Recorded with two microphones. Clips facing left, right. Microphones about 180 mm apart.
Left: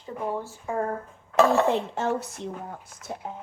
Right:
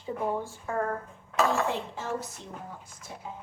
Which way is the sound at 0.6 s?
20° left (ahead or behind).